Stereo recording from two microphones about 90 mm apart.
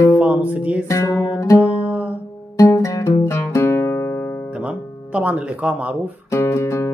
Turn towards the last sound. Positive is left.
turn(degrees=30)  # may be behind; listen again after turning